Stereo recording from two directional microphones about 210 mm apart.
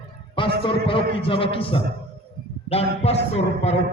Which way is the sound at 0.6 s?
25° left (ahead or behind).